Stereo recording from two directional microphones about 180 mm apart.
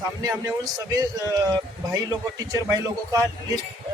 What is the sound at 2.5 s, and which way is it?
Speech, 20° right (ahead or behind).